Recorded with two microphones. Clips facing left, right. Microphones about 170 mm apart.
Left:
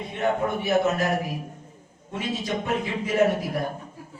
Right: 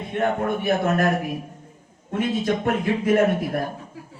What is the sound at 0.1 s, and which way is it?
Speech, 55° right (ahead or behind).